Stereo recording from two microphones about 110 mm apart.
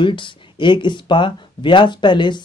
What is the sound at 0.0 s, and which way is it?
Speech, 50° left (ahead or behind).